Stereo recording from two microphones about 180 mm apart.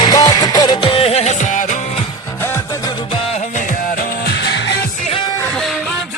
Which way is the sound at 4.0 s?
65° left (ahead or behind).